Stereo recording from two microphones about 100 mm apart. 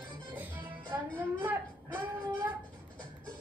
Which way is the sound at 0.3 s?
15° right (ahead or behind).